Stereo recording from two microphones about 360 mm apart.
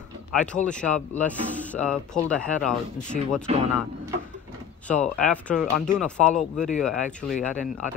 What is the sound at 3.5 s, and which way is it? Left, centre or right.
Speech, centre.